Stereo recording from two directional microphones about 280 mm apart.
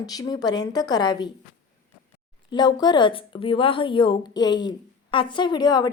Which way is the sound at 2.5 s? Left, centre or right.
Centre.